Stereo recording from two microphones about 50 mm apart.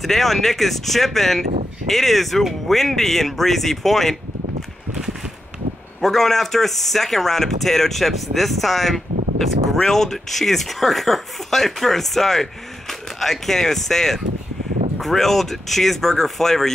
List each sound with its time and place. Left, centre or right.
0.0 s speech: centre
5.9 s speech: centre